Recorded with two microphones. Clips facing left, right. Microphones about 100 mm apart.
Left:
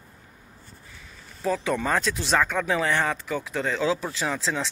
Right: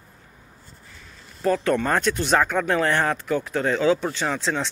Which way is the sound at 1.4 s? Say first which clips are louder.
Right 4 dB; centre (ahead or behind).